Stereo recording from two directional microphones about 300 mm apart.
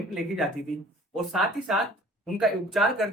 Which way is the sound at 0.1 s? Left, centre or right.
Centre.